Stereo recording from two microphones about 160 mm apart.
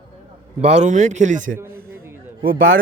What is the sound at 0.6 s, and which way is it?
A man's voice, 45° right (ahead or behind).